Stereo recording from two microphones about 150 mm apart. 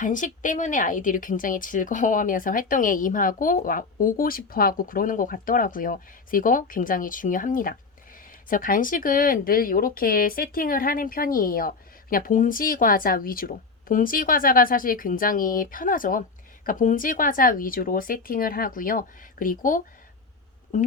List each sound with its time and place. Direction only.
0.0 s speech: 60° left (ahead or behind)
20.7 s speech: 55° left (ahead or behind)